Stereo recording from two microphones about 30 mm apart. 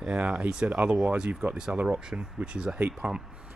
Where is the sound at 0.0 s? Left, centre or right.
Right.